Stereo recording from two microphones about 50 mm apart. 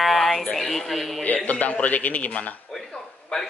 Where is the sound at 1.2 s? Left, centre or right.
Left.